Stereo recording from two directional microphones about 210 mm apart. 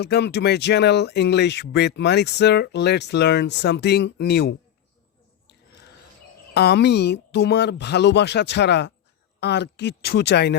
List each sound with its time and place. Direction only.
0.0 s speech: 50° left (ahead or behind)
5.5 s a sound: 55° left (ahead or behind)
6.5 s speech: 50° left (ahead or behind)